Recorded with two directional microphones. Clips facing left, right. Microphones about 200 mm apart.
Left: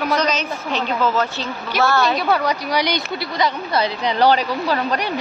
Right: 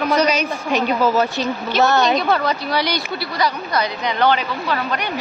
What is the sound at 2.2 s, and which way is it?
A woman's voice, 10° left (ahead or behind).